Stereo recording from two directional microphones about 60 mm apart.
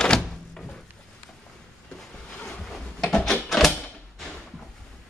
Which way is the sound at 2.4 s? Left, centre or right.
Centre.